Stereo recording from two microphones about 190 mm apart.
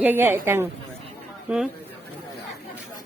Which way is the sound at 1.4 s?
5° right (ahead or behind).